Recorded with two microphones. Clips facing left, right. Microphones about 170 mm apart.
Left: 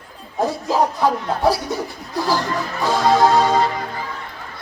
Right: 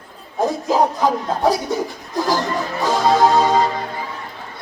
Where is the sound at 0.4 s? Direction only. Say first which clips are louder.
Right 2 dB; 20° right (ahead or behind).